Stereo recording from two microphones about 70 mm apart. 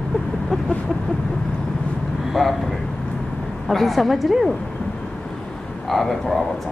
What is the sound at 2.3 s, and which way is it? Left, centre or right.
Speech, centre.